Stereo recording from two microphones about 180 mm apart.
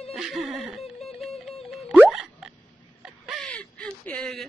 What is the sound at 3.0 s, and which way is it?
Fowl, centre (ahead or behind).